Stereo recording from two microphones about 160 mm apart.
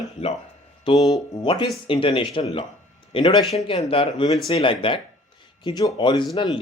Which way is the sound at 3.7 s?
35° left (ahead or behind).